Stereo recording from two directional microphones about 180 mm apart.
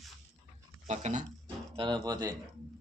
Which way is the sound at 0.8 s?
40° right (ahead or behind).